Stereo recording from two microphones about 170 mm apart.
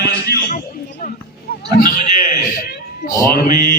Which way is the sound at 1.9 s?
50° left (ahead or behind).